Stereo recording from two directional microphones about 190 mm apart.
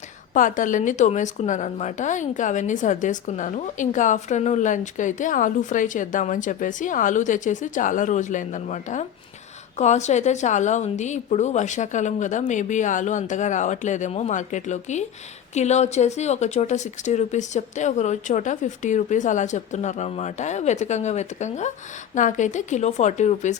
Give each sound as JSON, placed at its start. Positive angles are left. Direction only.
{"t": 0.3, "sound": "a woman's voice", "side_deg": 45}